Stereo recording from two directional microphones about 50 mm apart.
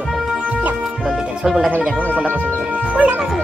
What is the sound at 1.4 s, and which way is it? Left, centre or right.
Speech, centre.